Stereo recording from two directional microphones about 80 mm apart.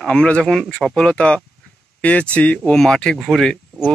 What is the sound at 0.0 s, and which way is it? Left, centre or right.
Speech, centre.